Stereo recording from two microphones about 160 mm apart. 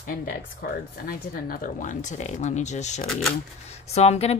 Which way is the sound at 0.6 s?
65° left (ahead or behind).